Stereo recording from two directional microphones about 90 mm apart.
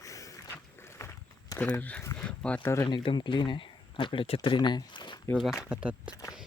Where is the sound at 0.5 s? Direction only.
30° left (ahead or behind).